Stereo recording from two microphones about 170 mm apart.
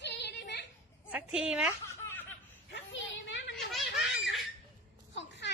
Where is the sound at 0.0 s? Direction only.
90° left.